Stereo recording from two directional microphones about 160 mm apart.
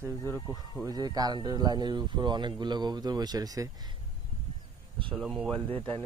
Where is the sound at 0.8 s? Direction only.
25° right (ahead or behind).